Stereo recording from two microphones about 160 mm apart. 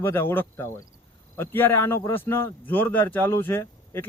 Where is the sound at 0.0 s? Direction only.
15° left (ahead or behind).